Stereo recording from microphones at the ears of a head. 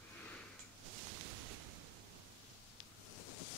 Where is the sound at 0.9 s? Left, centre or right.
Right.